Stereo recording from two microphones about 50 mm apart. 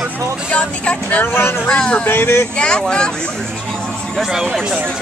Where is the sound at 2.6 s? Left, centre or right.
Centre.